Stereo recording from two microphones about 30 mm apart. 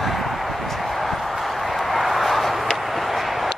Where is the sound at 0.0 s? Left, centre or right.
Centre.